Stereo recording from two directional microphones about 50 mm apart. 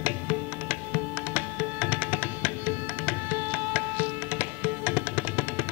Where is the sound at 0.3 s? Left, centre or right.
Right.